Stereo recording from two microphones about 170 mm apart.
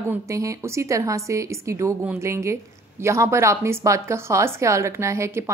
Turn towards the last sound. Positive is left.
turn(degrees=-15)  # may be behind; listen again after turning